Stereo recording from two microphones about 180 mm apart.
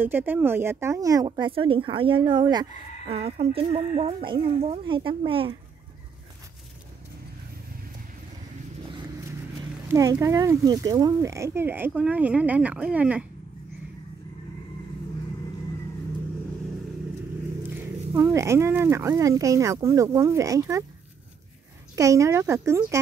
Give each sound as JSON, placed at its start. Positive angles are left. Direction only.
{"t": 0.0, "sound": "speech", "side_deg": -10}
{"t": 3.1, "sound": "speech", "side_deg": -35}
{"t": 9.9, "sound": "speech", "side_deg": -20}
{"t": 17.6, "sound": "speech", "side_deg": -10}
{"t": 21.9, "sound": "speech", "side_deg": -20}